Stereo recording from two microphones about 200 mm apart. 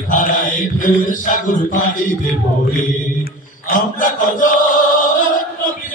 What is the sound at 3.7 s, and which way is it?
Chant, 40° left (ahead or behind).